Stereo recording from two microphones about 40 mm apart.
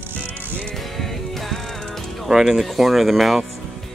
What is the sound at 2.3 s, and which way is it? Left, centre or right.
Speech, centre.